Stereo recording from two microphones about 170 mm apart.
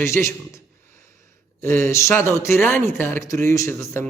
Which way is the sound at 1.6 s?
15° left (ahead or behind).